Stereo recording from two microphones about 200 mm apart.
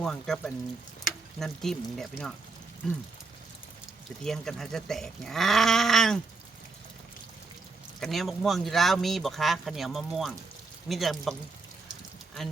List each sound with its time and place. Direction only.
0.0 s speech: 5° left (ahead or behind)
4.2 s speech: centre (ahead or behind)
8.0 s speech: centre (ahead or behind)